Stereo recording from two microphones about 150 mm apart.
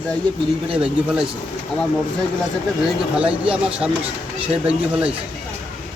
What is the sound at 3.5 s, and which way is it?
Speech, 5° right (ahead or behind).